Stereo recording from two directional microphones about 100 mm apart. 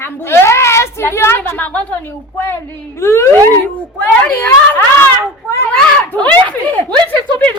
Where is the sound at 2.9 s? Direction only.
25° left (ahead or behind).